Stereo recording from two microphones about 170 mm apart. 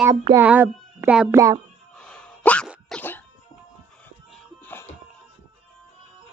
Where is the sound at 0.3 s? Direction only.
10° right (ahead or behind).